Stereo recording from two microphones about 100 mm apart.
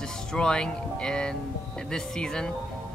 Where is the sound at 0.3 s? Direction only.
5° left (ahead or behind).